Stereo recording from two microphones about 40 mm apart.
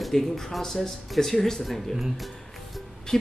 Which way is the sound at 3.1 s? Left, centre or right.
Centre.